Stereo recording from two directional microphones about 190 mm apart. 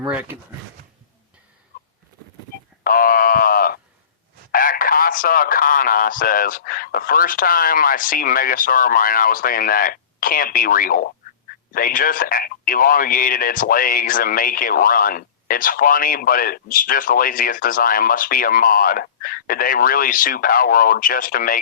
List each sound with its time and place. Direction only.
0.0 s speech: 5° right (ahead or behind)
2.8 s a sound: 50° left (ahead or behind)
4.5 s speech: 50° left (ahead or behind)